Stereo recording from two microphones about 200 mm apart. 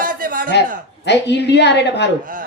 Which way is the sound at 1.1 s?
60° left (ahead or behind).